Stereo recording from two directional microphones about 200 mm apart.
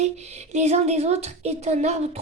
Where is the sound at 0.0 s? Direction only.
35° right (ahead or behind).